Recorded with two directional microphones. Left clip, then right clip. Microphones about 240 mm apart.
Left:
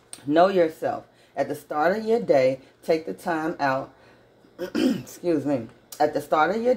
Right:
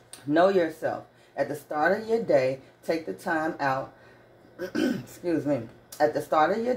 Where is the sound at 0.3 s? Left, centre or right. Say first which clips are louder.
Left 3 dB; left.